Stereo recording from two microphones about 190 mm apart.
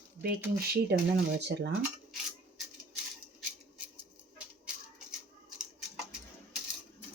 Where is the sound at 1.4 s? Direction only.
65° right (ahead or behind).